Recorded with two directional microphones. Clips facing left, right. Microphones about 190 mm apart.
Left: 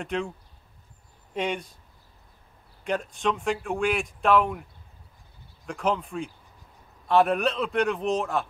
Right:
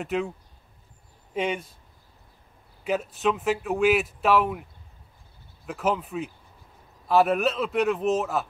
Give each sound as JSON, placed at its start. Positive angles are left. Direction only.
{"t": 0.0, "sound": "a man's voice", "side_deg": -5}
{"t": 1.3, "sound": "a man's voice", "side_deg": -5}
{"t": 2.8, "sound": "a man's voice", "side_deg": -5}
{"t": 5.7, "sound": "a man's voice", "side_deg": -5}